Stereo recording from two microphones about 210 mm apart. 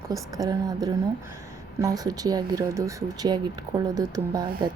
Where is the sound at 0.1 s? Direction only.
15° right (ahead or behind).